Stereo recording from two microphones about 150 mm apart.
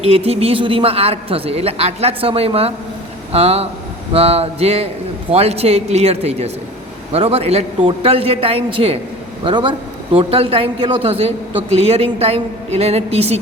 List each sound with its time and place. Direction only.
0.0 s a man's voice: 40° right (ahead or behind)